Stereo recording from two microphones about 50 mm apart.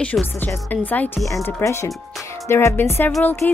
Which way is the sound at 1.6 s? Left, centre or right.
Left.